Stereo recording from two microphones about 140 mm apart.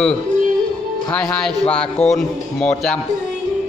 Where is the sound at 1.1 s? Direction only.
5° left (ahead or behind).